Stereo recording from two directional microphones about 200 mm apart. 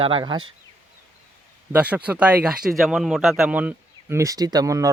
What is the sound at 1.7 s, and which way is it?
Speech, 5° right (ahead or behind).